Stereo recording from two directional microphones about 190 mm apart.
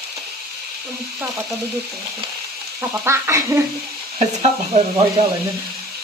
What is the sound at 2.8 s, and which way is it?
Speech, 15° right (ahead or behind).